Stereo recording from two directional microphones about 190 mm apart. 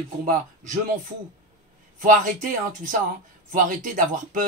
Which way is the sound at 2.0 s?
45° right (ahead or behind).